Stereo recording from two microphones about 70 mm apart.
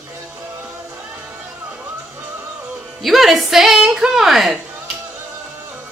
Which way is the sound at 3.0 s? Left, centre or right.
Centre.